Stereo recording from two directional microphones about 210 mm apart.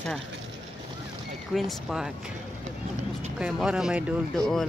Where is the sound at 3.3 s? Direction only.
5° right (ahead or behind).